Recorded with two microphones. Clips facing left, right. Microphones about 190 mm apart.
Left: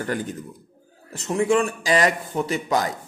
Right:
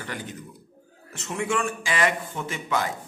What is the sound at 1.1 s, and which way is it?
A man's voice, 35° left (ahead or behind).